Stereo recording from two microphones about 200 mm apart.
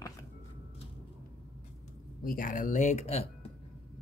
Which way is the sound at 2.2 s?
45° left (ahead or behind).